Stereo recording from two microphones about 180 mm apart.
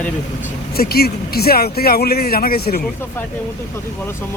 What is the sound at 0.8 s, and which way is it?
Speech, 60° left (ahead or behind).